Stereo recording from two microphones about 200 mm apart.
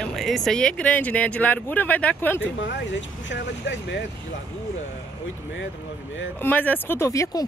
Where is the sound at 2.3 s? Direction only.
65° left (ahead or behind).